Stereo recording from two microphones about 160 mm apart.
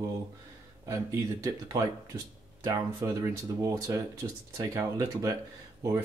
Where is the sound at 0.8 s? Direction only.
20° right (ahead or behind).